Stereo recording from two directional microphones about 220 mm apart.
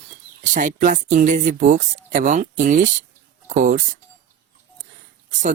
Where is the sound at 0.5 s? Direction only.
35° right (ahead or behind).